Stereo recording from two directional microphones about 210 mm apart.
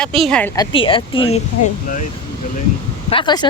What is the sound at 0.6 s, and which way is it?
Speech, 25° left (ahead or behind).